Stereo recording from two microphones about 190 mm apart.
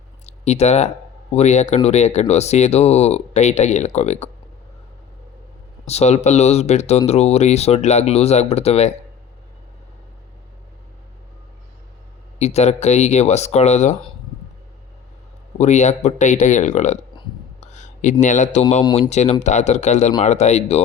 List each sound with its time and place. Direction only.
0.3 s speech: 35° left (ahead or behind)
5.8 s speech: 35° left (ahead or behind)
12.4 s speech: 35° left (ahead or behind)
15.5 s speech: 40° left (ahead or behind)
17.6 s a sound: 40° left (ahead or behind)
18.9 s speech: 35° left (ahead or behind)